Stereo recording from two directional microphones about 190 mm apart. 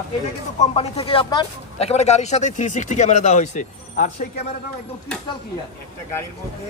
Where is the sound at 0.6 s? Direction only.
30° left (ahead or behind).